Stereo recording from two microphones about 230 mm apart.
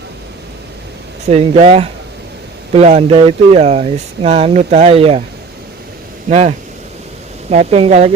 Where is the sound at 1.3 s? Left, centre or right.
Right.